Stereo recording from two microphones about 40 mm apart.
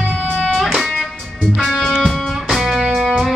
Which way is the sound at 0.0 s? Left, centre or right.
Left.